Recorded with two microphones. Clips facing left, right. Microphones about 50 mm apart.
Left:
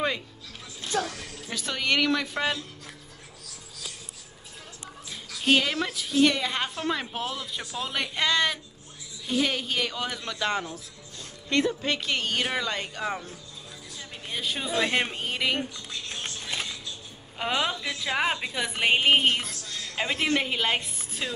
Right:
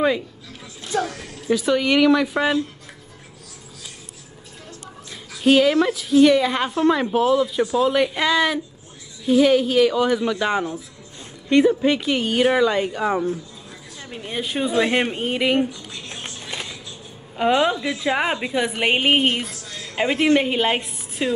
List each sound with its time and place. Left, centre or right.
1.0 s speech: centre
5.4 s a woman's voice: centre; by 15.6 s right
16.2 s a sound: centre
17.4 s speech: centre